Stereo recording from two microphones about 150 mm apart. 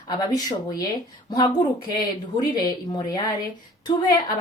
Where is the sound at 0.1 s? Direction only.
25° left (ahead or behind).